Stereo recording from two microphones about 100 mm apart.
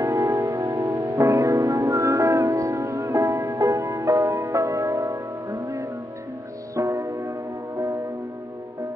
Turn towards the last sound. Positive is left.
turn(degrees=-30)  # may be behind; listen again after turning